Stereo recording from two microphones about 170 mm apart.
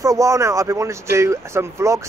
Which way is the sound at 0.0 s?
20° right (ahead or behind).